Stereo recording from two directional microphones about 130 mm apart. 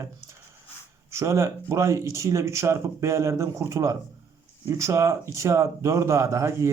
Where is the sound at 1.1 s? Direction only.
25° right (ahead or behind).